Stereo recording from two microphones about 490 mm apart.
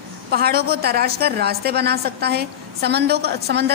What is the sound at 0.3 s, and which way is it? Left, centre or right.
A woman's voice, centre.